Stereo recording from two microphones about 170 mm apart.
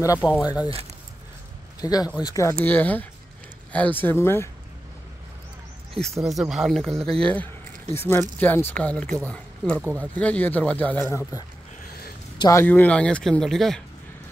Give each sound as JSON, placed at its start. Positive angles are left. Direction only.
{"t": 0.0, "sound": "speech", "side_deg": 20}
{"t": 1.8, "sound": "speech", "side_deg": 20}
{"t": 2.6, "sound": "speech", "side_deg": 10}
{"t": 5.9, "sound": "speech", "side_deg": 0}
{"t": 11.8, "sound": "a sound", "side_deg": 65}
{"t": 12.4, "sound": "speech", "side_deg": 15}